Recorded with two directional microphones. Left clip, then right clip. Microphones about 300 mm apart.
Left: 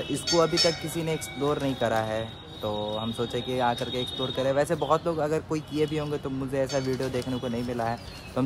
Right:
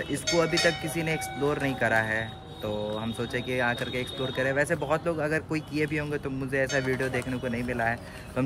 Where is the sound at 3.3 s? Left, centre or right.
Centre.